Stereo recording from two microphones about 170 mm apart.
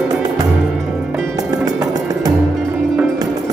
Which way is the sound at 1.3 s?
20° right (ahead or behind).